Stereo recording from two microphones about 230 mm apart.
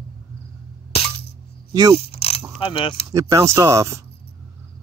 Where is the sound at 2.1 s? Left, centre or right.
Left.